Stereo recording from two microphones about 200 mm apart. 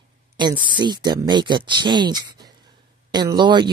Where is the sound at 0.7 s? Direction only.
20° right (ahead or behind).